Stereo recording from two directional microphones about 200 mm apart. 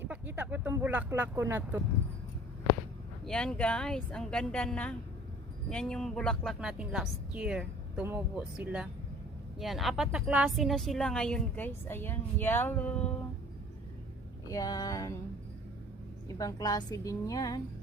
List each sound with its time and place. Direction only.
0.1 s vehicle: 10° right (ahead or behind)
3.2 s speech: 5° left (ahead or behind)
14.5 s a woman's voice: 20° left (ahead or behind)
16.4 s a woman's voice: 20° left (ahead or behind)